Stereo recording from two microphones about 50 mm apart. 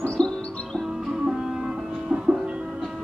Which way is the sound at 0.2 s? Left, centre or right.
Centre.